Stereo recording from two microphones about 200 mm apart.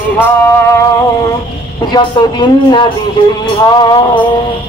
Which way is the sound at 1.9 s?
20° left (ahead or behind).